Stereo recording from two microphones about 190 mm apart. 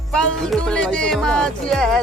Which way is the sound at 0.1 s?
5° left (ahead or behind).